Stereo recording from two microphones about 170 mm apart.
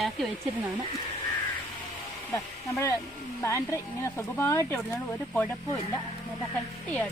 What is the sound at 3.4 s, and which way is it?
Speech, 15° left (ahead or behind).